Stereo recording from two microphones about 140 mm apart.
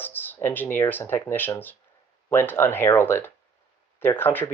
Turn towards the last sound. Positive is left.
turn(degrees=15)  # may be behind; listen again after turning